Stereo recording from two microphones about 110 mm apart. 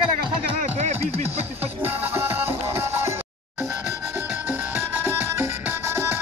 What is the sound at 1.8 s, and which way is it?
Music, 20° right (ahead or behind).